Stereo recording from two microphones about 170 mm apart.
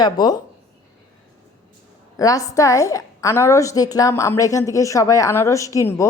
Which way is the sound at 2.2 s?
20° left (ahead or behind).